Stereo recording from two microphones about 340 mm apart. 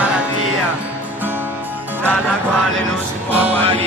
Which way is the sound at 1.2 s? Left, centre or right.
Centre.